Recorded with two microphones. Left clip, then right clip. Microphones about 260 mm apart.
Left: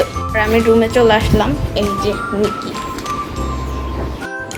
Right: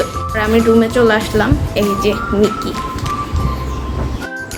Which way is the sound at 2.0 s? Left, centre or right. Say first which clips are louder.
Right 3 dB; centre.